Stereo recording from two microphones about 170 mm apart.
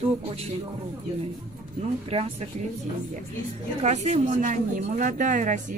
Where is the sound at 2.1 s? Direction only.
35° right (ahead or behind).